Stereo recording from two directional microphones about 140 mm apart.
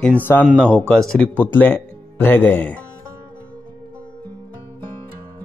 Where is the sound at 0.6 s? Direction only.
5° left (ahead or behind).